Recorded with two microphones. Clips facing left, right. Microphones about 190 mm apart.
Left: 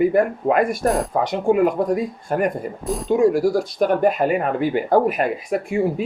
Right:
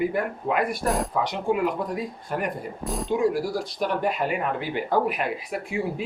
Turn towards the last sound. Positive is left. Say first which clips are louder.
# left 7 dB
turn(degrees=45)  # may be behind; listen again after turning